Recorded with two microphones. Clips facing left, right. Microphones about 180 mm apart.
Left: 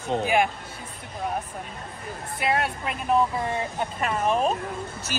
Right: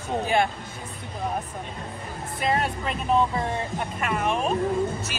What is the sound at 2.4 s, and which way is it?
Speech, 5° left (ahead or behind).